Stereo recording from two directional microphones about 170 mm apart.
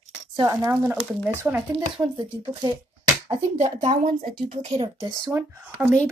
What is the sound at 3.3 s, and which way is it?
Speech, 40° right (ahead or behind).